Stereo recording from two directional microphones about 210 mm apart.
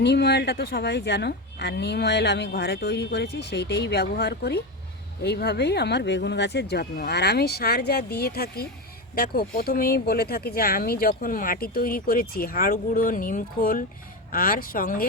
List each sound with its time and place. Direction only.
0.0 s speech: 55° left (ahead or behind)